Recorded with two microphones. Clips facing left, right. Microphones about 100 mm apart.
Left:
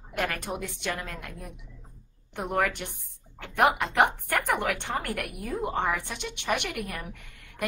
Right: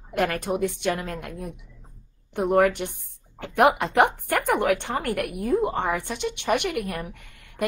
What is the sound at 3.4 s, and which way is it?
Speech, 55° right (ahead or behind).